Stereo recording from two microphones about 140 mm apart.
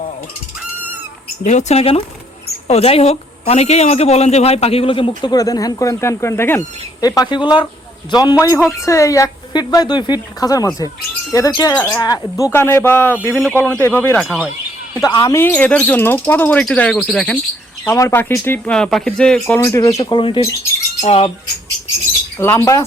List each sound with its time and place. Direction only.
1.5 s a woman's voice: 55° left (ahead or behind); by 14.2 s 15° left (ahead or behind)
14.2 s speech: 5° left (ahead or behind)
15.0 s speech: 25° left (ahead or behind)
15.4 s speech: 15° left (ahead or behind)
17.8 s speech: 20° left (ahead or behind)
19.5 s speech: 20° left (ahead or behind)
20.1 s a woman's voice: 35° left (ahead or behind)
22.4 s speech: 20° left (ahead or behind)